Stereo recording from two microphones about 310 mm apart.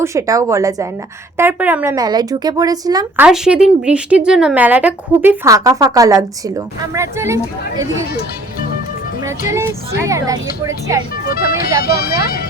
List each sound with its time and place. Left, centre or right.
0.0 s speech: centre
9.5 s speech: centre
11.3 s speech: left